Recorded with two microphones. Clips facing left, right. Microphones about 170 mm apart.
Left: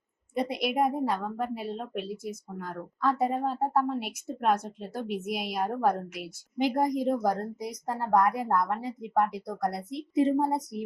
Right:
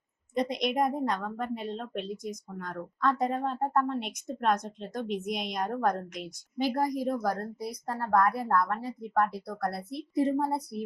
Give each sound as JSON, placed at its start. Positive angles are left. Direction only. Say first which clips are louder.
{"t": 0.3, "sound": "a woman's voice", "louder": "even", "side_deg": 5}
{"t": 6.6, "sound": "a woman's voice", "louder": "left 2 dB", "side_deg": 20}